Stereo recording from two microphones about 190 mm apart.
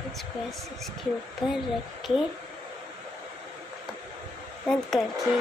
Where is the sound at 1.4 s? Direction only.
25° left (ahead or behind).